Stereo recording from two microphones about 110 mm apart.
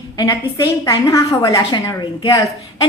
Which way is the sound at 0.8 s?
30° left (ahead or behind).